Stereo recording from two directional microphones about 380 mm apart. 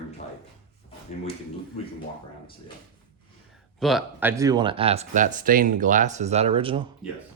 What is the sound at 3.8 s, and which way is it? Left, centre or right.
Speech, centre.